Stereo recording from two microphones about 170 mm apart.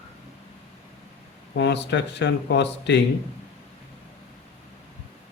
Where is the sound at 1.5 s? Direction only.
90° left.